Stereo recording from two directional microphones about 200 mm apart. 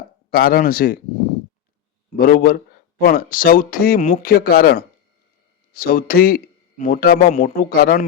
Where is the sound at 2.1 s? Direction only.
45° left (ahead or behind).